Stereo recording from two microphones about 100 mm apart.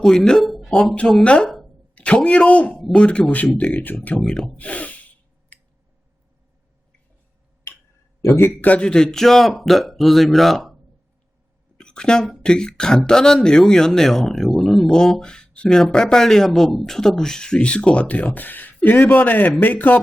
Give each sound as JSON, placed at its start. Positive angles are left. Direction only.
{"t": 0.0, "sound": "speech", "side_deg": 5}
{"t": 0.7, "sound": "speech", "side_deg": 10}
{"t": 3.6, "sound": "snort", "side_deg": 15}
{"t": 8.2, "sound": "speech", "side_deg": 25}
{"t": 11.8, "sound": "a sound", "side_deg": 10}
{"t": 12.4, "sound": "speech", "side_deg": 10}